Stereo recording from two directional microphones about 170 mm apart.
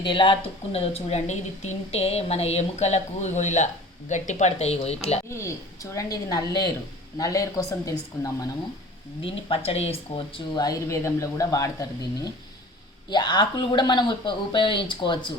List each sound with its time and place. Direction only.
0.0 s speech: 30° left (ahead or behind)
5.3 s speech: 15° left (ahead or behind)
9.5 s speech: 35° left (ahead or behind)